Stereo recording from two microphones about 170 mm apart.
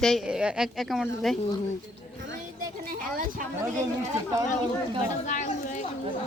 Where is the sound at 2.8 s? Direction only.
55° right (ahead or behind).